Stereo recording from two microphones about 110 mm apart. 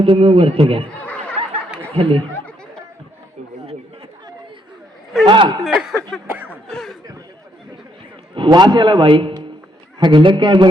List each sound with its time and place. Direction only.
0.0 s a man's voice: 55° right (ahead or behind)
0.9 s laughter: 15° left (ahead or behind)
2.0 s a man's voice: 55° right (ahead or behind)
5.2 s a man's voice: 45° right (ahead or behind)
5.7 s a sound: centre (ahead or behind)
8.4 s a man's voice: 40° right (ahead or behind)